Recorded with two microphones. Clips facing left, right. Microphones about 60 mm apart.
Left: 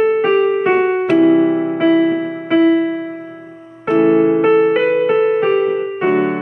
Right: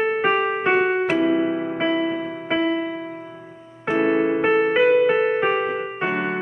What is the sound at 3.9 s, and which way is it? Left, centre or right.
Music, centre.